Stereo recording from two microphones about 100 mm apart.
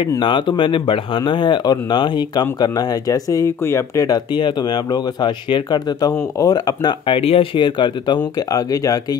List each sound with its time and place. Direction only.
0.2 s speech: 55° left (ahead or behind); by 4.2 s 35° left (ahead or behind)
4.3 s speech: 50° left (ahead or behind)
7.2 s speech: 70° left (ahead or behind); by 8.2 s 50° left (ahead or behind)
8.4 s speech: 35° left (ahead or behind)